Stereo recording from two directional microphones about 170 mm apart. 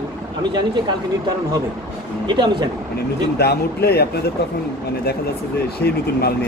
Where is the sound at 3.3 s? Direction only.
70° left (ahead or behind).